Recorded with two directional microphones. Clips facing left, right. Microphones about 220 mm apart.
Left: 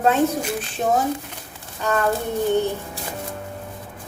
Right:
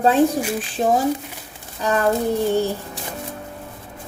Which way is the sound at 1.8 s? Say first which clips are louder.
Right 2 dB; 35° right (ahead or behind).